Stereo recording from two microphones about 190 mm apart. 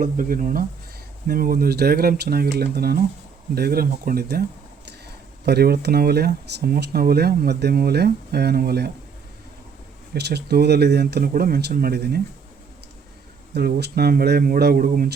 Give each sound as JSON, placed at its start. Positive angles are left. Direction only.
{"t": 0.0, "sound": "speech", "side_deg": -45}
{"t": 5.5, "sound": "speech", "side_deg": -55}
{"t": 10.2, "sound": "speech", "side_deg": -60}
{"t": 13.5, "sound": "speech", "side_deg": -60}